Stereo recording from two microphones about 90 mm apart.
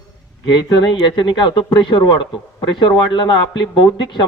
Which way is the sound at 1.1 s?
60° left (ahead or behind).